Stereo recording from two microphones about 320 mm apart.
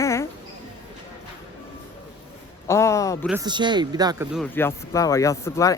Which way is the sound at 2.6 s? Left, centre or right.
Centre.